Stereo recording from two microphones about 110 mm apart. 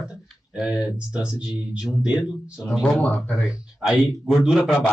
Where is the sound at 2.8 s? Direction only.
15° left (ahead or behind).